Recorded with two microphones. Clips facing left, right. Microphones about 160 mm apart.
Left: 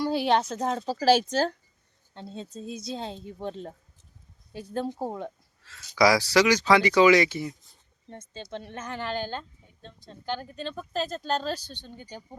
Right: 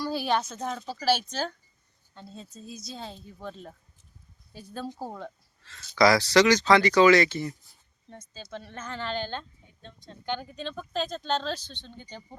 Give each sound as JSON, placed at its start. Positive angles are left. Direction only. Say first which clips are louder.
{"t": 0.0, "sound": "a woman's voice", "louder": "left 4 dB", "side_deg": 20}
{"t": 2.1, "sound": "a woman's voice", "louder": "left 6 dB", "side_deg": 25}
{"t": 4.8, "sound": "a woman's voice", "louder": "left 5 dB", "side_deg": 20}
{"t": 5.6, "sound": "speech", "louder": "even", "side_deg": 10}
{"t": 8.1, "sound": "a woman's voice", "louder": "left 3 dB", "side_deg": 25}